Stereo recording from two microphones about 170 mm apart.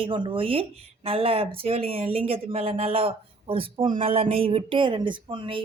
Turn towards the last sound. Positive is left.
turn(degrees=-30)  # may be behind; listen again after turning